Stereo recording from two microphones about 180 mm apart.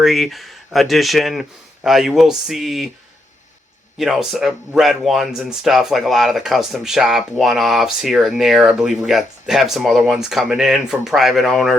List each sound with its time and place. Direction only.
0.0 s speech: centre (ahead or behind)
3.9 s speech: centre (ahead or behind)